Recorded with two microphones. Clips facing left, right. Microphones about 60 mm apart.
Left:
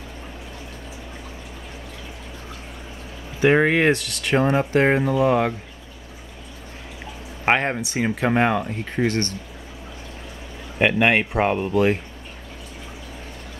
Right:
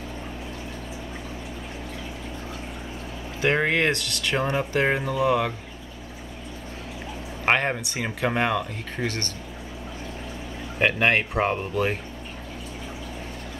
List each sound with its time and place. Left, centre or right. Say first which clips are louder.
3.3 s speech: left 5 dB; centre
7.4 s speech: left 2 dB; centre
10.8 s speech: left 3 dB; centre